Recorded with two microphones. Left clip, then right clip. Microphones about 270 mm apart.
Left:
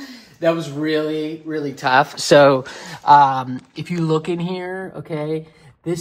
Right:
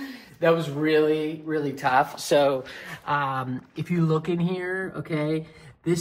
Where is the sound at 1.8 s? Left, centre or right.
Left.